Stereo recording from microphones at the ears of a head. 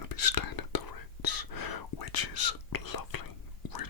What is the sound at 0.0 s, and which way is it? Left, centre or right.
Whispering, left.